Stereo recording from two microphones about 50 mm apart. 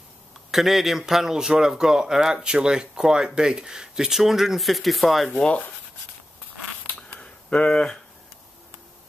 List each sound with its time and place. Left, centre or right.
0.5 s speech: centre
6.9 s zipper: left
7.2 s a sound: centre